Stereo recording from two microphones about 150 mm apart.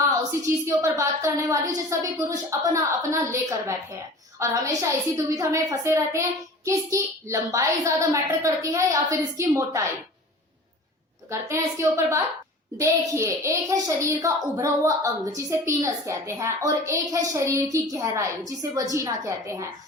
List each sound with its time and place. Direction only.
0.2 s a child's voice: 20° right (ahead or behind)
11.3 s a child's voice: 20° right (ahead or behind)